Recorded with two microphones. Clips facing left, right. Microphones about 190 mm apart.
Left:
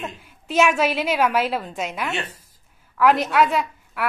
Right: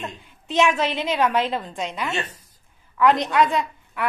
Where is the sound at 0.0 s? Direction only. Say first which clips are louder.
Left 1 dB; 5° left (ahead or behind).